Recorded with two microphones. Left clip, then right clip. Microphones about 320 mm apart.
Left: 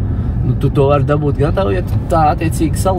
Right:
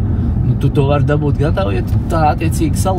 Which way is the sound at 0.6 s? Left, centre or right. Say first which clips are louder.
Left 3 dB; centre.